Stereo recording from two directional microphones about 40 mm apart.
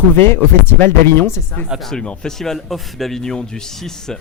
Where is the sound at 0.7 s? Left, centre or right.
Left.